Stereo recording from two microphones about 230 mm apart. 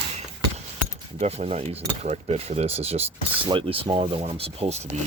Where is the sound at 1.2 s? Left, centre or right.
Right.